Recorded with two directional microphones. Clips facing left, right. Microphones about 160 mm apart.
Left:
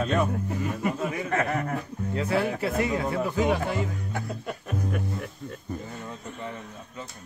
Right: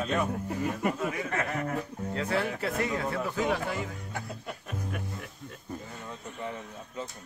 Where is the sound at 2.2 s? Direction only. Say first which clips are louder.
Left 4 dB; 10° left (ahead or behind).